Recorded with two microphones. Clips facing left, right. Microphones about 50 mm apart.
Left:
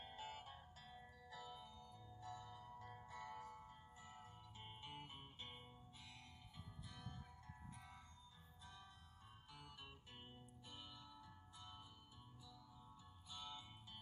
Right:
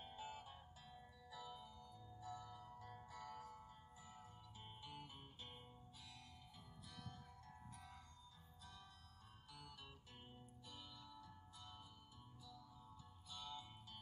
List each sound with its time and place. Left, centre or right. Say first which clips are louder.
0.0 s music: even; left
1.3 s music: right 1 dB; left
6.5 s music: left 2 dB; left
9.5 s music: even; left
13.3 s music: right 1 dB; left